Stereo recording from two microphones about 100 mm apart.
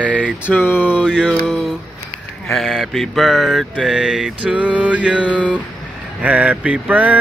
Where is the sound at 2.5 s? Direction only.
Centre (ahead or behind).